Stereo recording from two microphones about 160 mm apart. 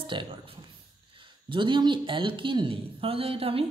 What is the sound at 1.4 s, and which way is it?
Speech, 30° right (ahead or behind).